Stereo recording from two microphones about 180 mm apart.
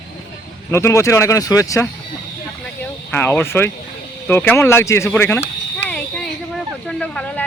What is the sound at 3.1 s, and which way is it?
Speech, 10° left (ahead or behind).